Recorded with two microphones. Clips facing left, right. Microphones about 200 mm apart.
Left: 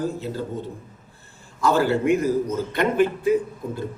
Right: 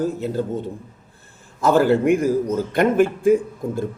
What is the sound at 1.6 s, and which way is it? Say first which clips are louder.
A man's voice: right 4 dB; 50° right (ahead or behind).